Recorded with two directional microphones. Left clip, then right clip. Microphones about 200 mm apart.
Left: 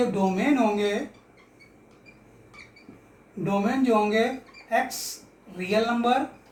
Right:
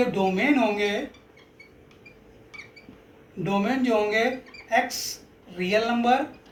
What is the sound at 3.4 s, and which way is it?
Speech, 20° left (ahead or behind).